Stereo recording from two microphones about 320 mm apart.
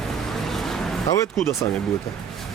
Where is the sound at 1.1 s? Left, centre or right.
Centre.